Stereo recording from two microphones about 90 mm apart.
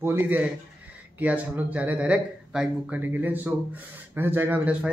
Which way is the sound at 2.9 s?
25° right (ahead or behind).